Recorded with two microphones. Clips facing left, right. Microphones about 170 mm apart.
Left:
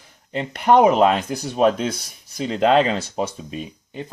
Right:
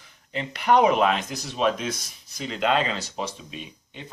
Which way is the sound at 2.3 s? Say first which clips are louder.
Left 7 dB; 35° left (ahead or behind).